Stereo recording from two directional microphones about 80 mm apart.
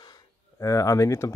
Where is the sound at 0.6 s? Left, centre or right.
Left.